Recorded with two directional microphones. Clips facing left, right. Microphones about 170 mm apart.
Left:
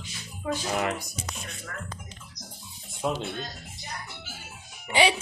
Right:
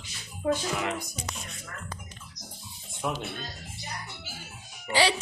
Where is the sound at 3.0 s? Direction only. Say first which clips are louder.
Left 3 dB; 25° left (ahead or behind).